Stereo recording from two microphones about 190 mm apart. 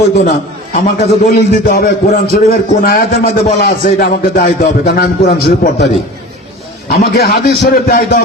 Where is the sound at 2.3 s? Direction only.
50° left (ahead or behind).